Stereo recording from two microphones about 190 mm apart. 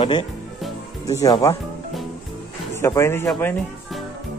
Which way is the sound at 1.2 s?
20° left (ahead or behind).